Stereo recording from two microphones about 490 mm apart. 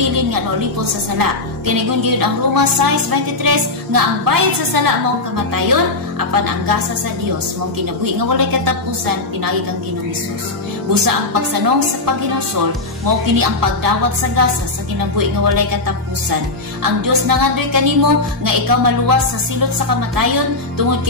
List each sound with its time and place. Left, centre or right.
1.1 s a woman's voice: right
8.0 s a woman's voice: right
10.9 s a woman's voice: right
13.0 s a woman's voice: right
16.8 s a woman's voice: right
20.2 s a woman's voice: right